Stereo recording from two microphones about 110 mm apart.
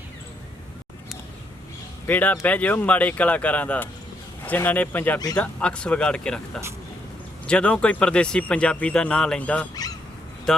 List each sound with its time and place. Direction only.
2.0 s speech: 15° left (ahead or behind)